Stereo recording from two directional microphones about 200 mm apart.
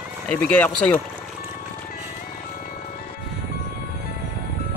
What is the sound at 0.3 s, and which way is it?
Speech, 5° left (ahead or behind).